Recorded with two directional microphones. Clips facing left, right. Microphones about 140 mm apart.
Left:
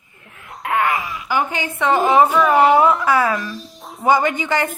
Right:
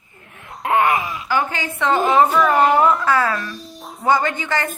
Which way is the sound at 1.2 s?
20° left (ahead or behind).